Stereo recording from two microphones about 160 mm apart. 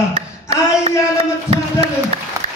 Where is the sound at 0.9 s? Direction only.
40° right (ahead or behind).